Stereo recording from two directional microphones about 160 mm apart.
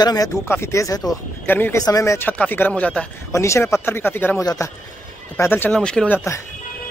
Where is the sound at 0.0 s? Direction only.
20° left (ahead or behind); by 3.1 s 5° left (ahead or behind).